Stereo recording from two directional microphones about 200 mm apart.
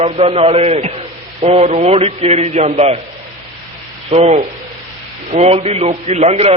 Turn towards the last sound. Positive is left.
turn(degrees=-30)  # may be behind; listen again after turning